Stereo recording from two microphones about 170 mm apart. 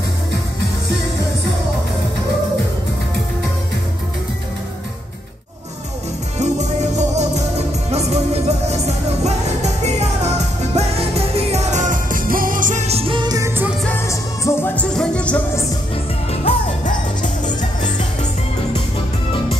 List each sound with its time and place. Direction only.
6.4 s music: 40° right (ahead or behind); by 13.7 s 20° right (ahead or behind)
13.8 s music: 15° left (ahead or behind)
16.3 s music: 45° left (ahead or behind)